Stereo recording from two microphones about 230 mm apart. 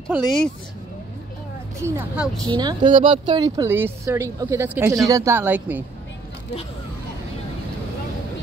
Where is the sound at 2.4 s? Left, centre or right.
Centre.